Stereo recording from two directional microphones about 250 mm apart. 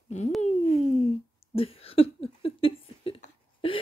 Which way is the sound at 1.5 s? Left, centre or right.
Left.